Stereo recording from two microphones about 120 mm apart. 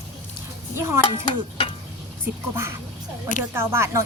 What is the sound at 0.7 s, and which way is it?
Speech, 20° right (ahead or behind).